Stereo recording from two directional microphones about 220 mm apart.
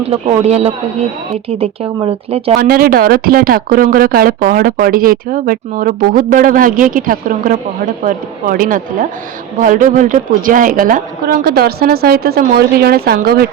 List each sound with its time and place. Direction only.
0.0 s speech: 25° right (ahead or behind)
2.6 s a woman's voice: 40° right (ahead or behind)